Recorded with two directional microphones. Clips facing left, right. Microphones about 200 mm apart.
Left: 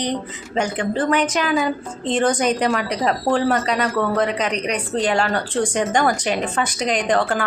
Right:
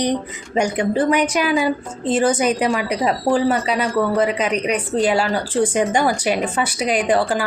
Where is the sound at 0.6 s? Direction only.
10° right (ahead or behind).